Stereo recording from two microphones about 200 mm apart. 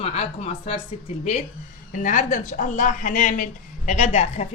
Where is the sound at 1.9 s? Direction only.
40° left (ahead or behind).